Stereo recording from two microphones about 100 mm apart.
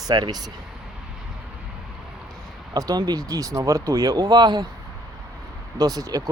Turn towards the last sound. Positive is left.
turn(degrees=-40)  # may be behind; listen again after turning